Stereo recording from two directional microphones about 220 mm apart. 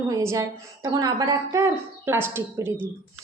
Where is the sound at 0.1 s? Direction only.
15° right (ahead or behind).